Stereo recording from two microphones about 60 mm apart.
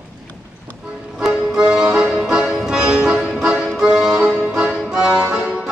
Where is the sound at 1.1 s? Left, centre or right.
Centre.